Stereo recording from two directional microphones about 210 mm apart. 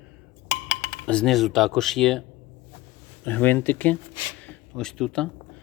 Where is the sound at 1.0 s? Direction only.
5° left (ahead or behind).